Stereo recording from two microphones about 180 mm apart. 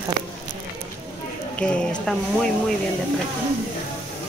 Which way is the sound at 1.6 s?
5° left (ahead or behind).